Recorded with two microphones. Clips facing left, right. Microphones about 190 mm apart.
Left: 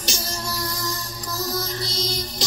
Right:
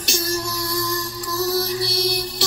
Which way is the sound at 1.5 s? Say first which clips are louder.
Right 6 dB; 70° right (ahead or behind).